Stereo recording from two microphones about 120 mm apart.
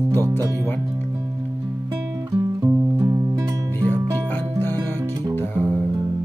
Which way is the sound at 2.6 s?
25° right (ahead or behind).